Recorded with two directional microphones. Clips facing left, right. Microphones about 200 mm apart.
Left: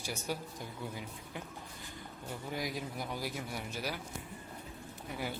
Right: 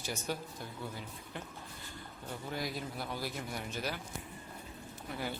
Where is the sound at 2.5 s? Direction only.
10° left (ahead or behind).